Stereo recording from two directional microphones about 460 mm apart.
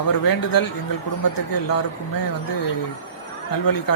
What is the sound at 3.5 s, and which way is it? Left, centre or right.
Speech, left.